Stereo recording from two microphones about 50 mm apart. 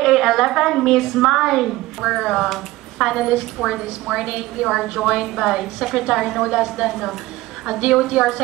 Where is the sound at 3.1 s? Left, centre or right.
Centre.